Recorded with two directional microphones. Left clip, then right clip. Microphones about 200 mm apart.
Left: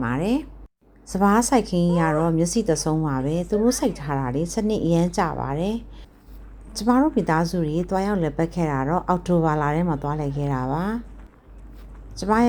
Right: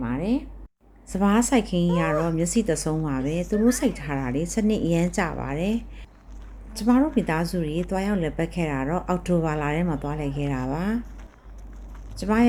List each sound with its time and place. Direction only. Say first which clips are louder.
0.0 s speech: left 3 dB; 20° left (ahead or behind)
1.1 s a woman's voice: left 3 dB; 5° left (ahead or behind)
12.1 s speech: left 3 dB; 5° left (ahead or behind)